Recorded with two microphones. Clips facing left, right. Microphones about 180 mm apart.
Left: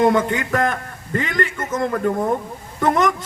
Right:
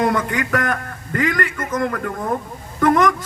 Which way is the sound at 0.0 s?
25° left (ahead or behind).